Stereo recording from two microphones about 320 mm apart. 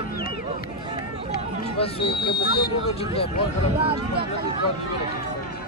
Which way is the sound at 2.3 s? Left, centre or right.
Left.